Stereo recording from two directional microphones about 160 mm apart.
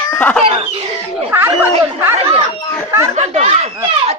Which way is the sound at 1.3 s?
15° right (ahead or behind).